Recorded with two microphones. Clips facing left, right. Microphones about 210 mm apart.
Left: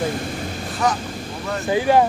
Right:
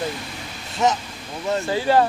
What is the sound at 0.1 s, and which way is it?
Vehicle, 50° left (ahead or behind).